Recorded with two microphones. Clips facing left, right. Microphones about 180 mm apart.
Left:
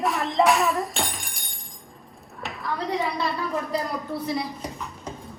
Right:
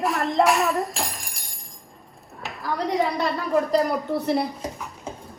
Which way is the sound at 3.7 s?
70° right (ahead or behind).